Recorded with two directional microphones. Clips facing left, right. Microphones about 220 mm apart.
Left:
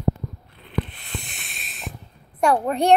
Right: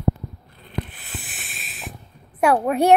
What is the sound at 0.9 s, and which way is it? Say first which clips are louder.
Sanding: left 2 dB; 5° right (ahead or behind).